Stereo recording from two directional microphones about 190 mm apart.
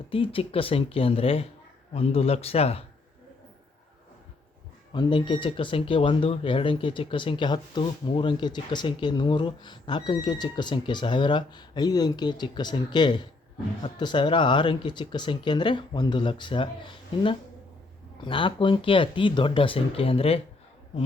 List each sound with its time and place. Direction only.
0.1 s speech: 30° left (ahead or behind)
4.9 s speech: 25° left (ahead or behind)
18.3 s speech: 25° left (ahead or behind)